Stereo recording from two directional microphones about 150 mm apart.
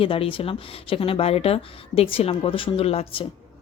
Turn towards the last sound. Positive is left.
turn(degrees=40)  # may be behind; listen again after turning